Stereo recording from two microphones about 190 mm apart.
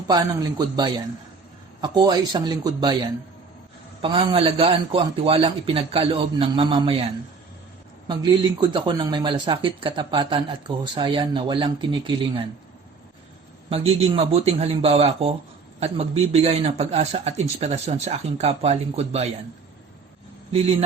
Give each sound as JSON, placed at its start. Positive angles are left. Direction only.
{"t": 0.1, "sound": "a man's voice", "side_deg": -20}
{"t": 8.0, "sound": "a man's voice", "side_deg": -25}
{"t": 13.7, "sound": "speech", "side_deg": -30}